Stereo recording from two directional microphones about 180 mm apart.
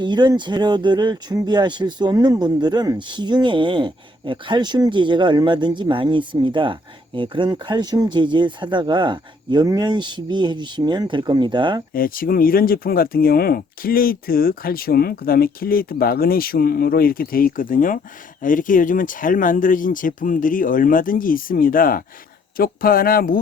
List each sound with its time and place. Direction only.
0.0 s speech: 25° right (ahead or behind)
11.9 s speech: 50° left (ahead or behind)